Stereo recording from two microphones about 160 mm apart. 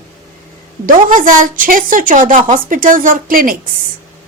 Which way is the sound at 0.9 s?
55° right (ahead or behind).